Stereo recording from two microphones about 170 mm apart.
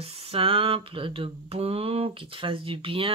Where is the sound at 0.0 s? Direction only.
35° right (ahead or behind).